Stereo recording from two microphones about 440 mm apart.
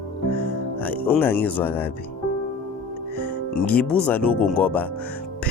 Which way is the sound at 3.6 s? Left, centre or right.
Centre.